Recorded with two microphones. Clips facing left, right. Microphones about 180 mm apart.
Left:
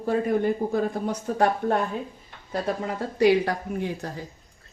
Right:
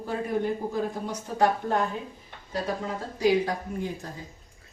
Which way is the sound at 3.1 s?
65° left (ahead or behind).